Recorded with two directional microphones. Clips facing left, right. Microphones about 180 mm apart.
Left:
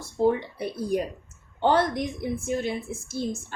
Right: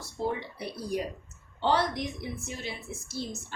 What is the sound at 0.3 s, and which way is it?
A woman's voice, 50° left (ahead or behind).